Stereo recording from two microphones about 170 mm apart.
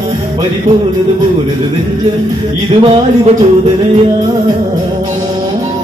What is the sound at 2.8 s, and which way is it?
Music, 30° right (ahead or behind).